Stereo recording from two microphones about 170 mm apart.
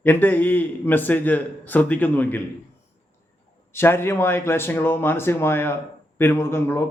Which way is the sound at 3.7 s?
15° left (ahead or behind).